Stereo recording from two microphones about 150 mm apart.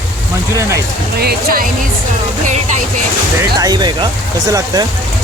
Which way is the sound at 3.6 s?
30° right (ahead or behind).